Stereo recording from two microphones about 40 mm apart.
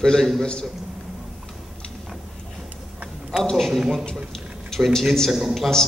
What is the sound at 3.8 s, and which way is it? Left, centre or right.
Speech, centre.